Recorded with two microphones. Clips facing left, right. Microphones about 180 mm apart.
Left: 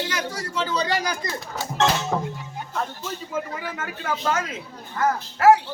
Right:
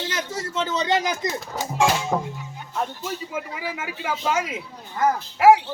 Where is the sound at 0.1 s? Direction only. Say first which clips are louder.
Even; 25° right (ahead or behind).